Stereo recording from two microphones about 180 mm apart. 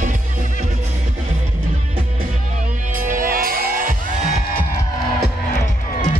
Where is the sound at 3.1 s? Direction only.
50° right (ahead or behind).